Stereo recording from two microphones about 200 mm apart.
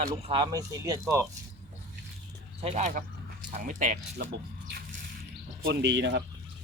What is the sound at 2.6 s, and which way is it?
Speech, 35° right (ahead or behind).